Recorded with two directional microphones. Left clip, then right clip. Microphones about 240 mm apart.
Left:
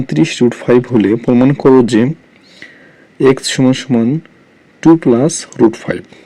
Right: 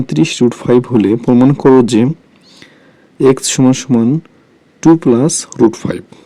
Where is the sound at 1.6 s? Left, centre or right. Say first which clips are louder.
Even; centre.